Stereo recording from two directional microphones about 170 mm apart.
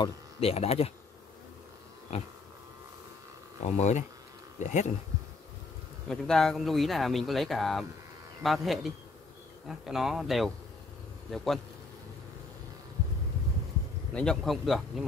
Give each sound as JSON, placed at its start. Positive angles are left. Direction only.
{"t": 0.4, "sound": "speech", "side_deg": 35}
{"t": 2.1, "sound": "speech", "side_deg": 35}
{"t": 3.6, "sound": "speech", "side_deg": 40}
{"t": 6.0, "sound": "speech", "side_deg": 5}
{"t": 14.1, "sound": "speech", "side_deg": 5}